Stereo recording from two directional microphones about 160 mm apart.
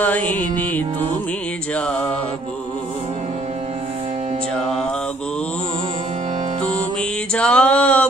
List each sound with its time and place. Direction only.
0.0 s music: 10° left (ahead or behind)
1.9 s music: 10° left (ahead or behind)
7.3 s a sound: 5° left (ahead or behind)